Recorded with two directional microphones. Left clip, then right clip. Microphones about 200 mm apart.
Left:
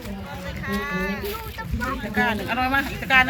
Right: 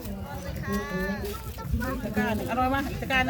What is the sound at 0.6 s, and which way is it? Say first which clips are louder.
Speech: left 5 dB; 35° right (ahead or behind).